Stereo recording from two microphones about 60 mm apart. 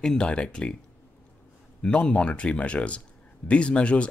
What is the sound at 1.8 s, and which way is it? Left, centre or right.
Speech, centre.